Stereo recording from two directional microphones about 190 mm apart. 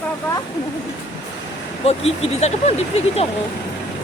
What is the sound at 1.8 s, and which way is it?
Speech, 30° left (ahead or behind).